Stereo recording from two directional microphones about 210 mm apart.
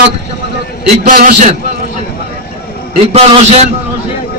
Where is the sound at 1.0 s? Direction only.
40° right (ahead or behind).